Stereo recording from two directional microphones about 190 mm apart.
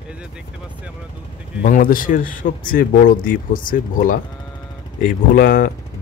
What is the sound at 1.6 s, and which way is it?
Speech, 45° left (ahead or behind).